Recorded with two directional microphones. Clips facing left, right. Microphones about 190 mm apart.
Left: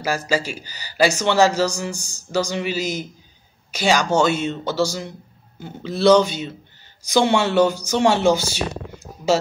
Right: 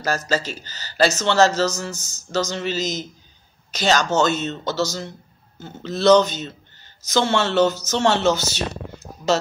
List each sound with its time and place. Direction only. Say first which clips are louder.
0.3 s a man's voice: left 1 dB; 10° left (ahead or behind)